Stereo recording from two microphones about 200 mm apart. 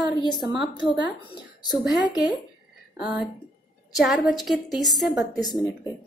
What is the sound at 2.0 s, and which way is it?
Speech, 20° left (ahead or behind).